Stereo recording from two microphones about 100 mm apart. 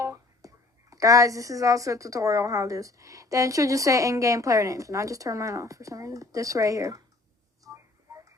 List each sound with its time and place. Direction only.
0.0 s speech: 30° right (ahead or behind)
7.7 s tick-tock: 30° right (ahead or behind)